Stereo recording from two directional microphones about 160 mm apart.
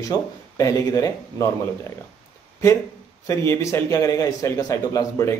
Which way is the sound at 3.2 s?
15° left (ahead or behind).